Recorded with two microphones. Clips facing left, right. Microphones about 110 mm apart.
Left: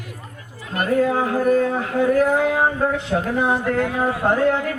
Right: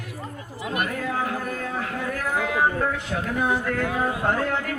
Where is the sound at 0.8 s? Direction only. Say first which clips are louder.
Left 10 dB; 30° left (ahead or behind).